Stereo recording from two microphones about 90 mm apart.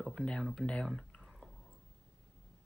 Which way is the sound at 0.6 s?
10° left (ahead or behind).